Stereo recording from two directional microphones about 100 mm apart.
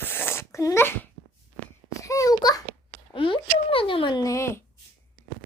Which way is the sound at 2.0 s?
35° left (ahead or behind).